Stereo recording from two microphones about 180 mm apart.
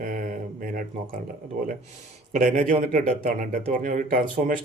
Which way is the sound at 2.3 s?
45° right (ahead or behind).